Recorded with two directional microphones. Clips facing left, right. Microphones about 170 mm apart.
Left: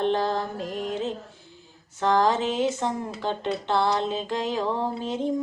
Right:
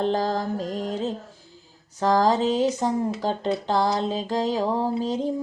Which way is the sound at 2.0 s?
40° right (ahead or behind).